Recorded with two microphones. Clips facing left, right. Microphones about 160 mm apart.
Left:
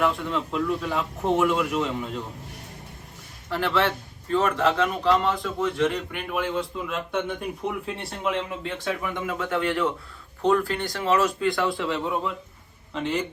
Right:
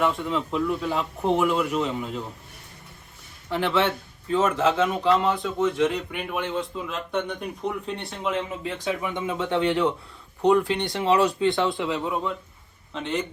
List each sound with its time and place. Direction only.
0.0 s a man's voice: centre (ahead or behind)
3.5 s a man's voice: centre (ahead or behind)
9.0 s speech: 20° right (ahead or behind)
10.9 s speech: 30° right (ahead or behind)
11.7 s a man's voice: centre (ahead or behind)